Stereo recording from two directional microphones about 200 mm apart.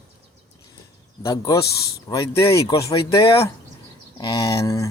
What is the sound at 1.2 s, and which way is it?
Speech, 15° left (ahead or behind).